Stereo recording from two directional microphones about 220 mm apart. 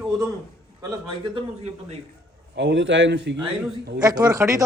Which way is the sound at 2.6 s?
55° right (ahead or behind).